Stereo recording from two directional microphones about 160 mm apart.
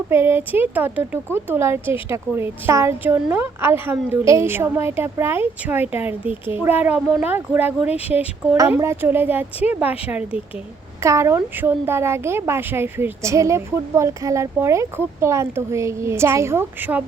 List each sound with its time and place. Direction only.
0.1 s speech: 15° right (ahead or behind)